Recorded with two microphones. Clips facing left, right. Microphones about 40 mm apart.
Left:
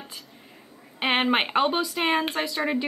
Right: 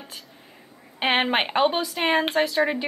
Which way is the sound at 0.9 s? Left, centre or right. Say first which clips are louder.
Right 1 dB; centre.